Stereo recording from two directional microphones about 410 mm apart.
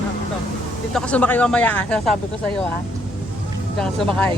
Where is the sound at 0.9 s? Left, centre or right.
Centre.